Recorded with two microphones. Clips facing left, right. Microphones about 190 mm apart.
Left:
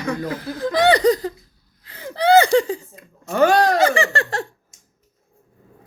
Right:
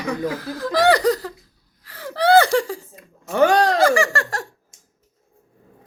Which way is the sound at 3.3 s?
15° right (ahead or behind).